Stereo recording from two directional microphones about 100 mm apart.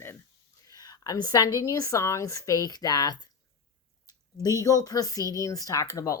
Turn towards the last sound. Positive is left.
turn(degrees=35)  # may be behind; listen again after turning